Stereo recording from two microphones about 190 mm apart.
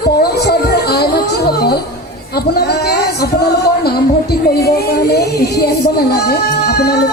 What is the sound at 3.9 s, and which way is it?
Music, 55° left (ahead or behind).